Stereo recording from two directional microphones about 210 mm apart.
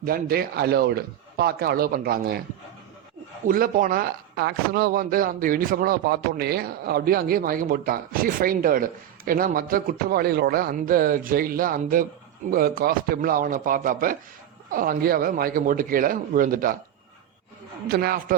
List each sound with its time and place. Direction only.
0.0 s speech: 45° right (ahead or behind)
3.4 s speech: 40° right (ahead or behind)
17.8 s speech: 45° right (ahead or behind)